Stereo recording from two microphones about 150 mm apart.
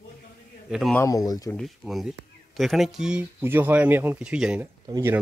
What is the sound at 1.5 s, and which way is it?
Speech, centre (ahead or behind).